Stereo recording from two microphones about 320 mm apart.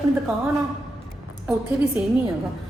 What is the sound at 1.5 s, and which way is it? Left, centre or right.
Speech, centre.